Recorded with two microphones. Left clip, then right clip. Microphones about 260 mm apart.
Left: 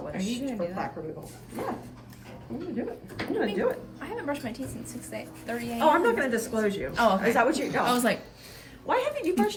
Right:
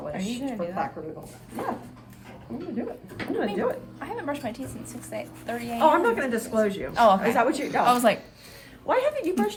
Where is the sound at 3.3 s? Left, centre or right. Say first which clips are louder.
Even; right.